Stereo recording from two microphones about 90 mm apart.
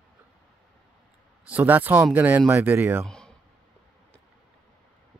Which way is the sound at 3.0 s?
10° left (ahead or behind).